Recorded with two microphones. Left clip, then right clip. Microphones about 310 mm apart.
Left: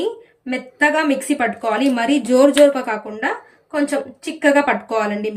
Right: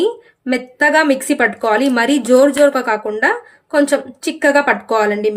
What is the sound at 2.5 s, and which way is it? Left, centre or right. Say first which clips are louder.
Speech: right 1 dB; centre.